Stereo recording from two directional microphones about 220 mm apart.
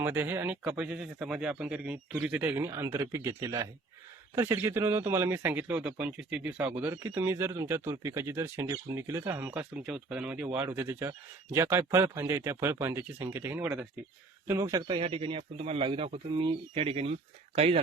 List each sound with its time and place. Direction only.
0.0 s a man's voice: 10° right (ahead or behind); by 17.7 s 25° right (ahead or behind)